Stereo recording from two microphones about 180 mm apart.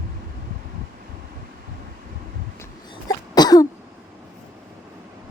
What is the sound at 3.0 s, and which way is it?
Cough, 20° left (ahead or behind).